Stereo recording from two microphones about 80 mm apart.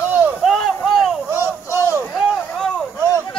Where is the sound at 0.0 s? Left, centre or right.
Right.